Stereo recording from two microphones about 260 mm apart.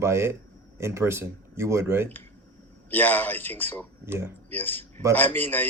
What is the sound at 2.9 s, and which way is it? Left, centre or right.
Speech, centre.